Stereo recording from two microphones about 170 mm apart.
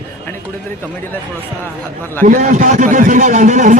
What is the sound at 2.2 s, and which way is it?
A man's voice, 45° right (ahead or behind).